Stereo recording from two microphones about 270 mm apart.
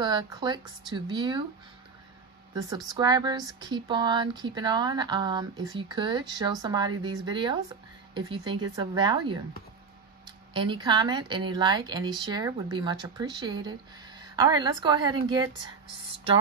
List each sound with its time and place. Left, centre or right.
0.0 s speech: centre
3.0 s speech: centre
8.7 s speech: centre